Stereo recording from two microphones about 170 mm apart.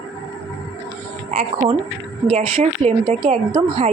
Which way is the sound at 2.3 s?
50° right (ahead or behind).